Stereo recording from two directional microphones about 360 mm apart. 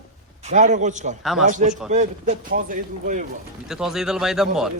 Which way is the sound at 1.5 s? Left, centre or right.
Right.